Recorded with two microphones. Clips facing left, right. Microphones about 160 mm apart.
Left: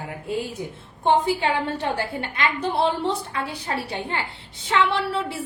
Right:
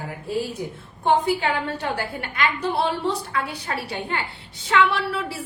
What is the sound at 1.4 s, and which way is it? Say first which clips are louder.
A woman's voice: left 1 dB; 25° left (ahead or behind).